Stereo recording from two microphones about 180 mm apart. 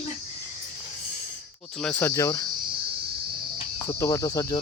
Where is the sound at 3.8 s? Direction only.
15° left (ahead or behind).